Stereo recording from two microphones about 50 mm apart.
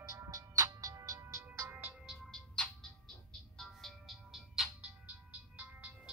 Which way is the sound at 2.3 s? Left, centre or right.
Centre.